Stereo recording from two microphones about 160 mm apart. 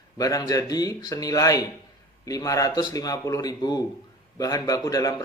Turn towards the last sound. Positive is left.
turn(degrees=20)  # may be behind; listen again after turning